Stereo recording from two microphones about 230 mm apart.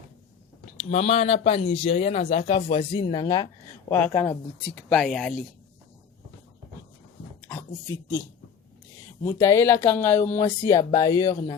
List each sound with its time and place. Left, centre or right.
0.8 s speech: left; by 5.5 s centre
7.4 s speech: centre